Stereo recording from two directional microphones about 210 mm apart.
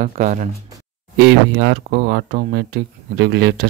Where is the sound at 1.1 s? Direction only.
50° right (ahead or behind).